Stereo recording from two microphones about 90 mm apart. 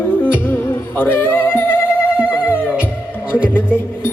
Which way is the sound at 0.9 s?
25° left (ahead or behind).